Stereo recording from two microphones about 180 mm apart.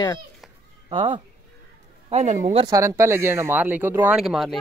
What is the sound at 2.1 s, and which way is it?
Speech, 40° right (ahead or behind).